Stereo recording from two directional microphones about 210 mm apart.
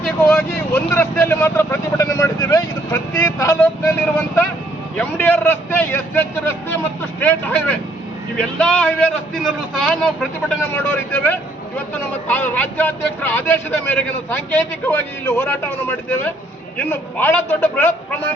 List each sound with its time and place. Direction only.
0.0 s vehicle: 5° left (ahead or behind)
4.9 s a man's voice: 10° left (ahead or behind)